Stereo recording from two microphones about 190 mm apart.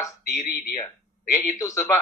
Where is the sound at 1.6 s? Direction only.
15° left (ahead or behind).